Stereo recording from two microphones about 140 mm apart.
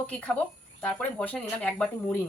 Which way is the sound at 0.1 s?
10° left (ahead or behind).